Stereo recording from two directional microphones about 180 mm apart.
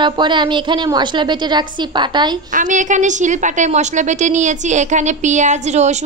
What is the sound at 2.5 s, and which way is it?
A woman's voice, 45° right (ahead or behind).